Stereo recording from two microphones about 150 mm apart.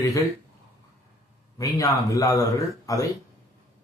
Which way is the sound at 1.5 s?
20° left (ahead or behind).